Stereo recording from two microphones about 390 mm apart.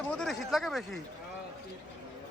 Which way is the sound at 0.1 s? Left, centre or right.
Centre.